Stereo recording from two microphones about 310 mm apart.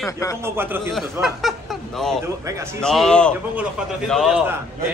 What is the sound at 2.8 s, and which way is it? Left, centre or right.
A man's voice, centre.